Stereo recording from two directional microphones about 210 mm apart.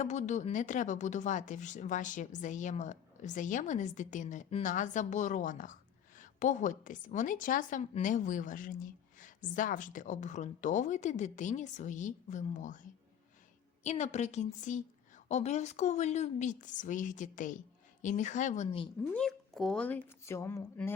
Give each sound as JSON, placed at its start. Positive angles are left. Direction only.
{"t": 0.0, "sound": "a woman's voice", "side_deg": 35}
{"t": 13.8, "sound": "a woman's voice", "side_deg": 30}
{"t": 19.1, "sound": "speech", "side_deg": 5}